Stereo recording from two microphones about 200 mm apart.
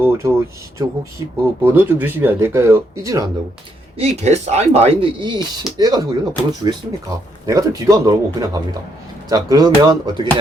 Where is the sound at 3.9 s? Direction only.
30° right (ahead or behind).